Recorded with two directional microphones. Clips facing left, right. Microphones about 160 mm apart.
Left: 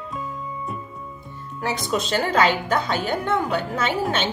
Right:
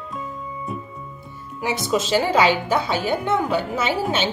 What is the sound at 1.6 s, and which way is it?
A woman's voice, 5° right (ahead or behind).